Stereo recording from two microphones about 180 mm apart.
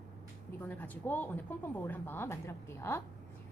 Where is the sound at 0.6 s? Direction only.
10° left (ahead or behind).